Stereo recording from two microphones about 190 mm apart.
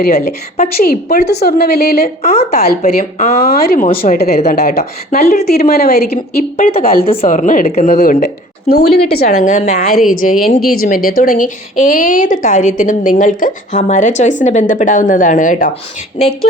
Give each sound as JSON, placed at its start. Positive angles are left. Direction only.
{"t": 0.1, "sound": "a woman's voice", "side_deg": 35}
{"t": 0.8, "sound": "a woman's voice", "side_deg": 50}
{"t": 2.8, "sound": "a woman's voice", "side_deg": 35}
{"t": 3.4, "sound": "a woman's voice", "side_deg": 55}
{"t": 4.5, "sound": "a woman's voice", "side_deg": 55}
{"t": 4.8, "sound": "a woman's voice", "side_deg": 40}
{"t": 6.6, "sound": "a woman's voice", "side_deg": 45}
{"t": 7.0, "sound": "a woman's voice", "side_deg": 30}
{"t": 8.7, "sound": "a woman's voice", "side_deg": 55}
{"t": 9.4, "sound": "a woman's voice", "side_deg": 40}